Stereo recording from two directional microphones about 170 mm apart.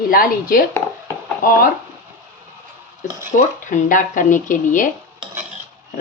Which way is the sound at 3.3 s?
50° left (ahead or behind).